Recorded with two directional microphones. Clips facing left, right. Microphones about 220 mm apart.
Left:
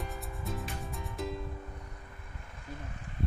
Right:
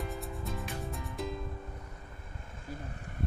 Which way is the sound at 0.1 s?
Centre (ahead or behind).